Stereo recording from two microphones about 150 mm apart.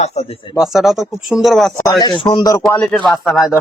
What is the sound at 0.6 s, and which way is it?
A man's voice, centre (ahead or behind).